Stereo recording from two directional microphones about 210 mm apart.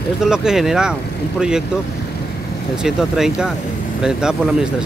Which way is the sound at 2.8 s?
5° right (ahead or behind).